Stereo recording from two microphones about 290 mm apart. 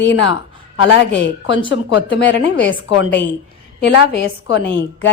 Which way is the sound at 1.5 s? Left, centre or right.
Centre.